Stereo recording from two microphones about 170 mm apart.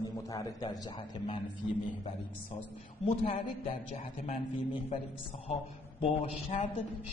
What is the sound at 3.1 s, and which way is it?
A man's voice, 35° left (ahead or behind).